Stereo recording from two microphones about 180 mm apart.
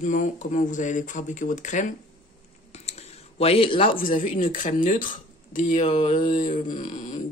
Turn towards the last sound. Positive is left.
turn(degrees=45)  # may be behind; listen again after turning